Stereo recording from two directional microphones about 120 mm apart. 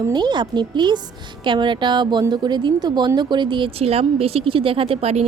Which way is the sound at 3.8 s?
55° right (ahead or behind).